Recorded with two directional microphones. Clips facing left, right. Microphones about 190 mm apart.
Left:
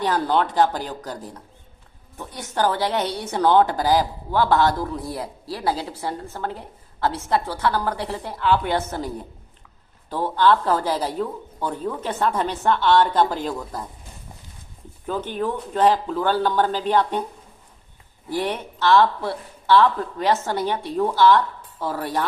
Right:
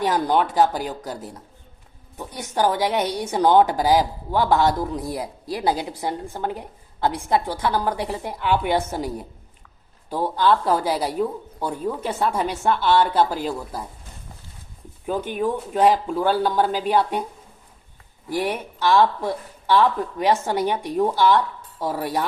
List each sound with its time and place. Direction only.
0.0 s a woman's voice: 15° right (ahead or behind)
15.0 s a woman's voice: 10° right (ahead or behind)
18.3 s a woman's voice: 10° right (ahead or behind)